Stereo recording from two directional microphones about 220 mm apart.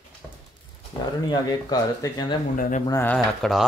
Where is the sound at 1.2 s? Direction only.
20° left (ahead or behind).